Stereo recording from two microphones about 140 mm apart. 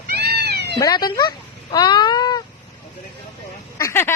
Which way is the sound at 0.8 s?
30° left (ahead or behind).